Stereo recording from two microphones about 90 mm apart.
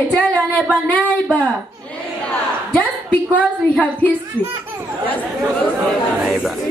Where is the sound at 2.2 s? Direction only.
15° left (ahead or behind).